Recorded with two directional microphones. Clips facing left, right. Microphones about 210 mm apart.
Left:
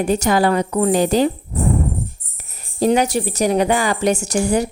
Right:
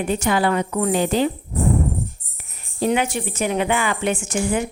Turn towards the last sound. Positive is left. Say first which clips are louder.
# left 4 dB
turn(degrees=40)  # may be behind; listen again after turning